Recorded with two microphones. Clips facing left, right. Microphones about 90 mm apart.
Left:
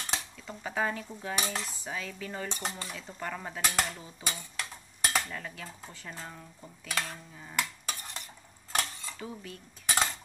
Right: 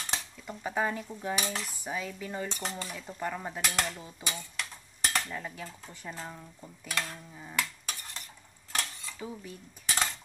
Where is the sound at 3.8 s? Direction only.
10° left (ahead or behind).